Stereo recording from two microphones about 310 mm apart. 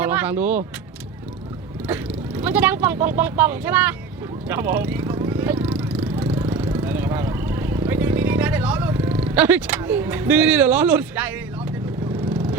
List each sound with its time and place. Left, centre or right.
0.0 s speech: centre
1.9 s speech: centre
4.4 s vehicle: centre